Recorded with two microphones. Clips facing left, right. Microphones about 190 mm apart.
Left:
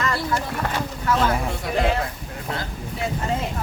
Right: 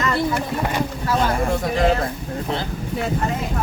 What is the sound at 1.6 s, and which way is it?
Speech, 45° right (ahead or behind).